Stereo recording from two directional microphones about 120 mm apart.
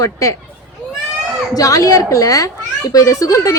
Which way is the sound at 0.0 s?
25° left (ahead or behind).